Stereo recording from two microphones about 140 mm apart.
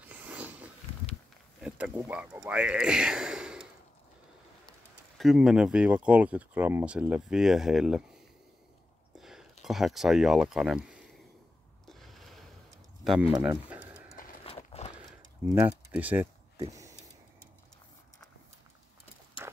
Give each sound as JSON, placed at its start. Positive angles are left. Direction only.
{"t": 0.0, "sound": "a sound", "side_deg": -10}
{"t": 1.6, "sound": "speech", "side_deg": -10}
{"t": 5.1, "sound": "speech", "side_deg": 0}
{"t": 9.2, "sound": "speech", "side_deg": 0}
{"t": 11.9, "sound": "a sound", "side_deg": 0}
{"t": 13.0, "sound": "speech", "side_deg": 0}
{"t": 13.7, "sound": "pigeon", "side_deg": -10}
{"t": 14.4, "sound": "horse", "side_deg": 45}
{"t": 15.6, "sound": "speech", "side_deg": -10}
{"t": 16.6, "sound": "a sound", "side_deg": -25}